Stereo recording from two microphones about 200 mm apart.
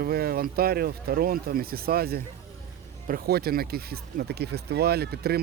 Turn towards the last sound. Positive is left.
turn(degrees=-50)  # may be behind; listen again after turning